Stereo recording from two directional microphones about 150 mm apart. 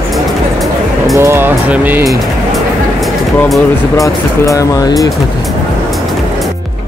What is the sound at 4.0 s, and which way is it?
Speech, 20° left (ahead or behind).